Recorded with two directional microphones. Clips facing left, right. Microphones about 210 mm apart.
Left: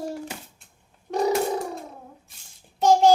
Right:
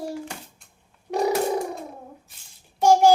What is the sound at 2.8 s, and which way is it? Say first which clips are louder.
Child singing: right 1 dB; 10° right (ahead or behind).